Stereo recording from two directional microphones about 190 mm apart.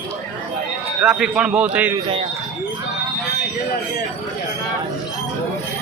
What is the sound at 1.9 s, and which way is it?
Speech, 25° right (ahead or behind).